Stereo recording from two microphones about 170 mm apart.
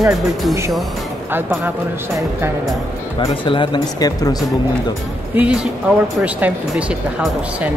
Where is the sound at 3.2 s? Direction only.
30° left (ahead or behind).